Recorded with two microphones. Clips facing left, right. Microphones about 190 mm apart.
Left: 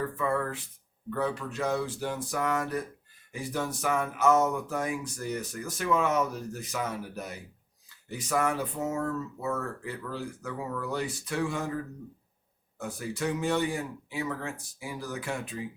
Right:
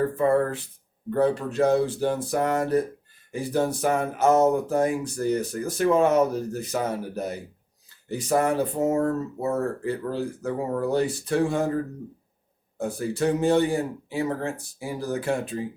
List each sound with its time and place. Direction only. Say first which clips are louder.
0.0 s speech: right 8 dB; 35° right (ahead or behind)